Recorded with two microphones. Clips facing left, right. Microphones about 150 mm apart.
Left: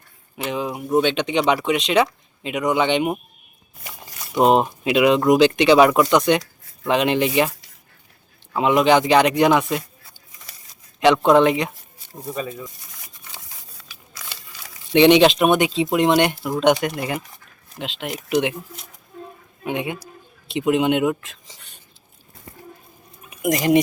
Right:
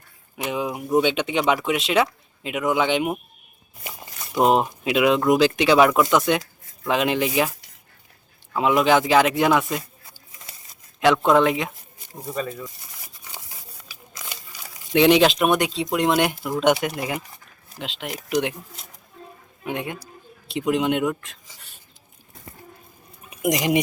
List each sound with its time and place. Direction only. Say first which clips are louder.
0.3 s speech: left 1 dB; 10° right (ahead or behind)
4.6 s speech: left 3 dB; centre (ahead or behind)
8.5 s speech: left 2 dB; centre (ahead or behind)
11.0 s speech: left 3 dB; centre (ahead or behind)
13.2 s crumpling: right 2 dB; 10° right (ahead or behind)
14.9 s speech: left 3 dB; centre (ahead or behind)
23.3 s speech: left 4 dB; 20° right (ahead or behind)